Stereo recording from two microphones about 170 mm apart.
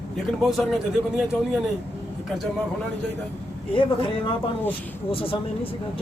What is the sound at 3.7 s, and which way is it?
A woman's voice, 30° left (ahead or behind).